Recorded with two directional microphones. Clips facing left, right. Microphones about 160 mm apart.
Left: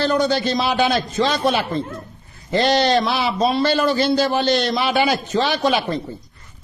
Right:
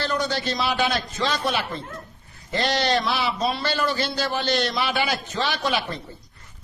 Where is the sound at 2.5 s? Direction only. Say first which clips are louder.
Left 6 dB; 20° left (ahead or behind).